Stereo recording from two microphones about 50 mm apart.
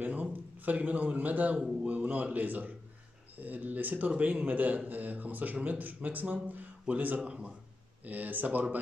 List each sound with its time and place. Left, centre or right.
0.0 s a man's voice: right
7.2 s speech: right
8.0 s a man's voice: right